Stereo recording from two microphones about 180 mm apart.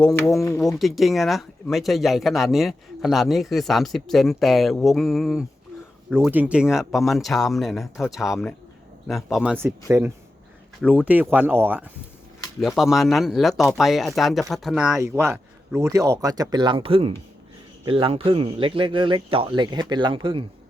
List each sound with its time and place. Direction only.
0.3 s speech: 15° left (ahead or behind)
0.8 s speech: centre (ahead or behind)
10.8 s speech: 5° right (ahead or behind)
12.5 s speech: centre (ahead or behind)
14.9 s speech: 15° right (ahead or behind)